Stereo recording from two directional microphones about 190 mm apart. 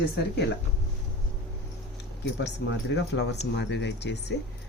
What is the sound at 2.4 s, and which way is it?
Speech, 65° left (ahead or behind).